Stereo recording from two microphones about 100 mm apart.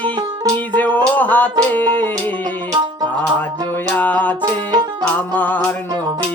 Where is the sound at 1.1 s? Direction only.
15° left (ahead or behind).